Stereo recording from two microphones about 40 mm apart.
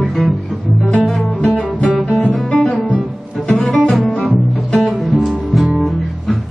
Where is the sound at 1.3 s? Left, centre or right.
Left.